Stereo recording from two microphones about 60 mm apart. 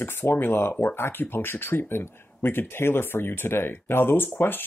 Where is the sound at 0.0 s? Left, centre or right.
Left.